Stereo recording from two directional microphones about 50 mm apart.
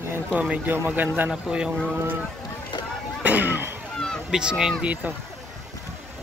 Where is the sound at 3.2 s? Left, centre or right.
Right.